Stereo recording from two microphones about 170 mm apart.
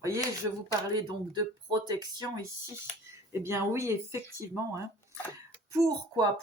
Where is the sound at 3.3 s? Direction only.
15° right (ahead or behind).